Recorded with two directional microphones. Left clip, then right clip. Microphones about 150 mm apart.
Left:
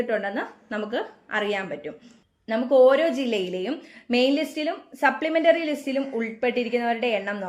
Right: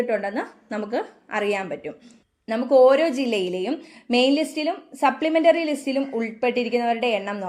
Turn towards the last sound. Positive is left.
turn(degrees=-35)  # may be behind; listen again after turning